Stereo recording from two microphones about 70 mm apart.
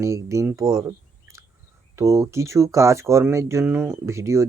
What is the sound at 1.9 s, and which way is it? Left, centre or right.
Speech, right.